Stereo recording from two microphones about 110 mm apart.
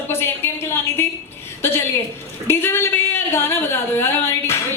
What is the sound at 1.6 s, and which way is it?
Speech, 20° left (ahead or behind).